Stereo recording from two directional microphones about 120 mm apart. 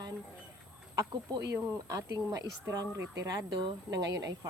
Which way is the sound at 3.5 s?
35° right (ahead or behind).